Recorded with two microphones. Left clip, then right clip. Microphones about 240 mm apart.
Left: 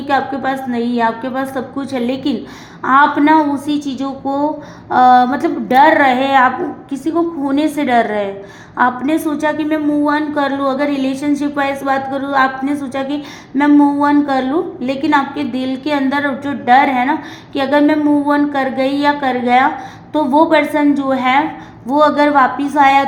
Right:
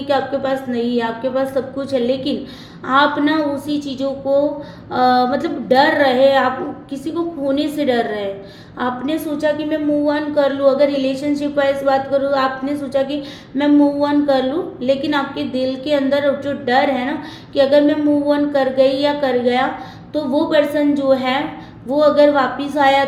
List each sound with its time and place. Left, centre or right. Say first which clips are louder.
0.1 s a woman's voice: left 2 dB; left
4.9 s a woman's voice: left 5 dB; left
14.0 s a woman's voice: left 2 dB; left